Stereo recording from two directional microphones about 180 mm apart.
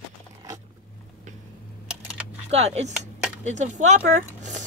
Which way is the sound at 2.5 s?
35° right (ahead or behind).